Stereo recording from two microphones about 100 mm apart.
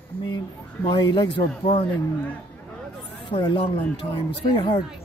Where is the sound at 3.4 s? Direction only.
60° left (ahead or behind).